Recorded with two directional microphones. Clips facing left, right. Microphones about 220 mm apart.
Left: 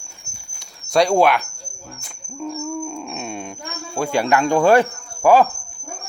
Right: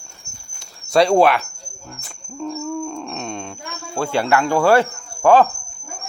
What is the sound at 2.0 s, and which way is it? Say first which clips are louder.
Speech: right 1 dB; 5° left (ahead or behind).